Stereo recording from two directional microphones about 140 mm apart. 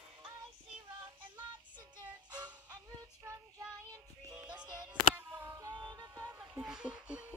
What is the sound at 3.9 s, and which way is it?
Music, 25° right (ahead or behind).